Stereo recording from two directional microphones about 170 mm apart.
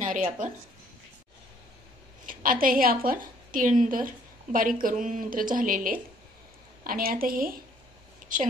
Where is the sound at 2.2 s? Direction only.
55° right (ahead or behind).